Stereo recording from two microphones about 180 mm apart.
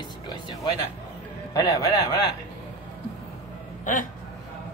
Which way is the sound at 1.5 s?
20° left (ahead or behind).